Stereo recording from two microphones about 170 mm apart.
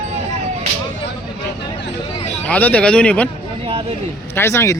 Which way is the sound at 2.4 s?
10° left (ahead or behind).